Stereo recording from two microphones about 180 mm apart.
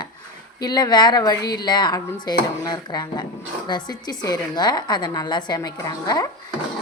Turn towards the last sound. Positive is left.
turn(degrees=20)  # may be behind; listen again after turning